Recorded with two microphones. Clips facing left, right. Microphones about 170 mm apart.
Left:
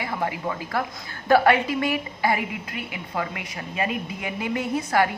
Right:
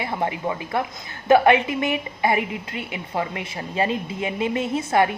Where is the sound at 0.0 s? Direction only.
25° right (ahead or behind).